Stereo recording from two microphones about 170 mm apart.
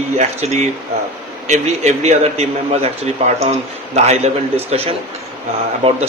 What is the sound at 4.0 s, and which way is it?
A man's voice, 40° right (ahead or behind).